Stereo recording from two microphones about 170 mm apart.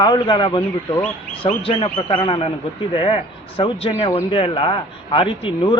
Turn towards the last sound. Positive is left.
turn(degrees=30)  # may be behind; listen again after turning